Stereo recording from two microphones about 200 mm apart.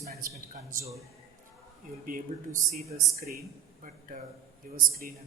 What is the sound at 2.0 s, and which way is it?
A man's voice, 45° right (ahead or behind).